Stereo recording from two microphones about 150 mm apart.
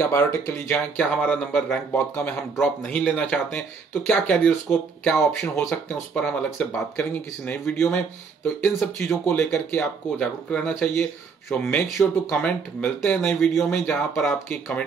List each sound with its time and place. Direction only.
0.0 s speech: 15° left (ahead or behind)
2.5 s speech: centre (ahead or behind)